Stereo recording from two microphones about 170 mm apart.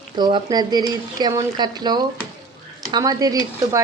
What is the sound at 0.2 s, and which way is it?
Speech, 25° right (ahead or behind).